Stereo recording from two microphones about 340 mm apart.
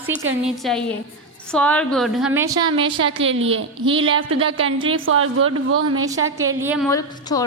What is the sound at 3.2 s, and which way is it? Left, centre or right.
Speech, right.